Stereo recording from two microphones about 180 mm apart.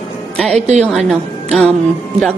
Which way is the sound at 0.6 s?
40° right (ahead or behind).